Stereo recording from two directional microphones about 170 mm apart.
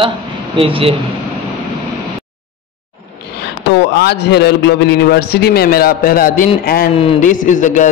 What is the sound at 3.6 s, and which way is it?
A man's voice, 75° left (ahead or behind).